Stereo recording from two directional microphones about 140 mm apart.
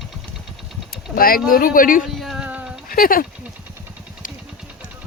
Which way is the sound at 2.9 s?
90° left.